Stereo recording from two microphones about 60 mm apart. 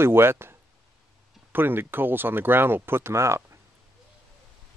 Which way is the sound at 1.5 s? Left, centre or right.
Right.